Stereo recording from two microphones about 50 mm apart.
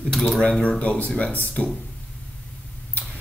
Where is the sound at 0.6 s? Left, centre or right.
Left.